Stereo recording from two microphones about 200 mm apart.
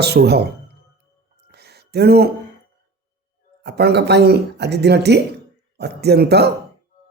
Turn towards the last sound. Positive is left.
turn(degrees=-55)  # may be behind; listen again after turning